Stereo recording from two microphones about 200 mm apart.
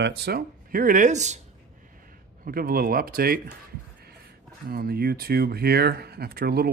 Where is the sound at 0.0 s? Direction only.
50° right (ahead or behind); by 1.4 s 35° right (ahead or behind).